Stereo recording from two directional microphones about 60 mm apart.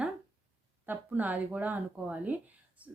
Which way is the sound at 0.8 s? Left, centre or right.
Right.